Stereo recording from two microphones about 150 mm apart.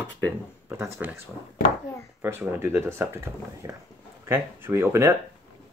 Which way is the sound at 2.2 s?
15° right (ahead or behind).